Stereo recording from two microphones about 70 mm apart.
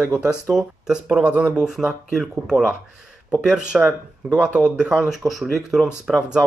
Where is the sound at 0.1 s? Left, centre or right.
Centre.